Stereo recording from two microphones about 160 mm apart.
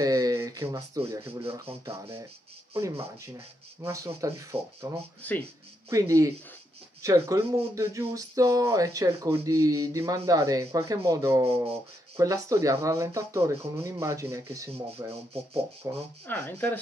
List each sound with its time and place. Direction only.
0.0 s speech: 20° right (ahead or behind)
2.7 s speech: 15° right (ahead or behind)
5.2 s speech: 10° left (ahead or behind)
5.9 s speech: 20° right (ahead or behind)
16.3 s speech: 10° left (ahead or behind)